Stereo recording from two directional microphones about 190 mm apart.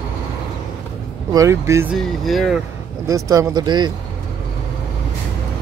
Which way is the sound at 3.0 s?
15° right (ahead or behind).